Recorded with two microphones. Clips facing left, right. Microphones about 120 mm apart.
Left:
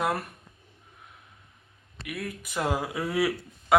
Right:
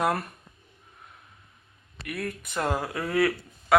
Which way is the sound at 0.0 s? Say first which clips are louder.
Right 2 dB; centre (ahead or behind).